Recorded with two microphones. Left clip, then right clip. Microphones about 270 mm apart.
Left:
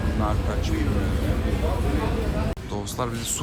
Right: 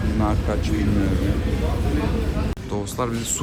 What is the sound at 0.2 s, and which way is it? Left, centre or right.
Speech, centre.